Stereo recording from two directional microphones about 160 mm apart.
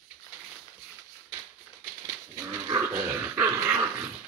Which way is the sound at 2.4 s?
15° right (ahead or behind).